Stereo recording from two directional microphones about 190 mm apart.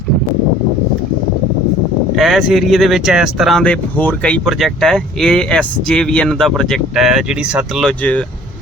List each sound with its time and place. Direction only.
2.1 s speech: centre (ahead or behind)